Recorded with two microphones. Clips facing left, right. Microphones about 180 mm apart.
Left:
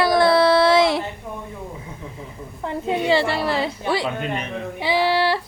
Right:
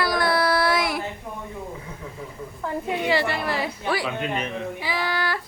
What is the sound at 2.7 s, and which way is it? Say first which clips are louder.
Speech: left 4 dB; 25° left (ahead or behind).